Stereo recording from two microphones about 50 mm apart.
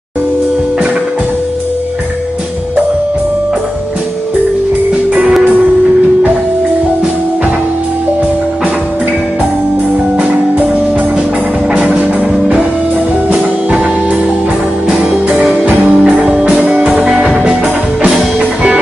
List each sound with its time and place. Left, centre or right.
10.1 s music: right
15.3 s music: right
18.4 s music: right